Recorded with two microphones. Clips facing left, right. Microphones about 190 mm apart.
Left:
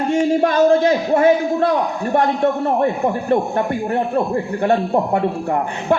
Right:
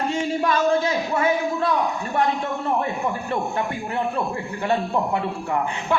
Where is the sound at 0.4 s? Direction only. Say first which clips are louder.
Left 5 dB; 55° left (ahead or behind).